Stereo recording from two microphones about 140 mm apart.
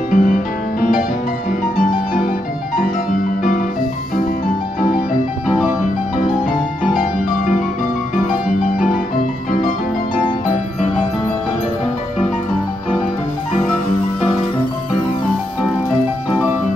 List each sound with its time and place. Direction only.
0.1 s music: 80° left
5.5 s music: 10° right (ahead or behind)